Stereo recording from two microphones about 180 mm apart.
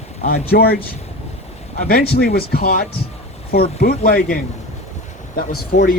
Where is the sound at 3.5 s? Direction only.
35° left (ahead or behind).